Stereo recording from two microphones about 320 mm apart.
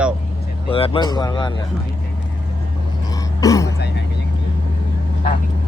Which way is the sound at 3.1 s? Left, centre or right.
Centre.